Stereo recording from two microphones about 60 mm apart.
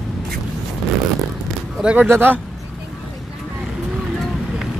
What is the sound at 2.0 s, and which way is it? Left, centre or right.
Speech, right.